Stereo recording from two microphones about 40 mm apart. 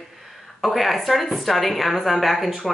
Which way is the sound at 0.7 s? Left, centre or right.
Centre.